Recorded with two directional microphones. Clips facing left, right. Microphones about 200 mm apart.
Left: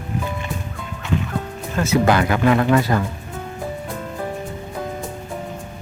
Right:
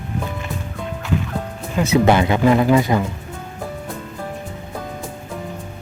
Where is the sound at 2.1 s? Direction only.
25° right (ahead or behind).